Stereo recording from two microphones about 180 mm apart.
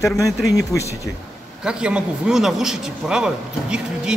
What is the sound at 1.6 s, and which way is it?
A man's voice, 5° right (ahead or behind).